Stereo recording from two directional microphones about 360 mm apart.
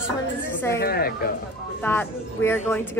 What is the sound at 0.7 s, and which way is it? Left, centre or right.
Speech, left.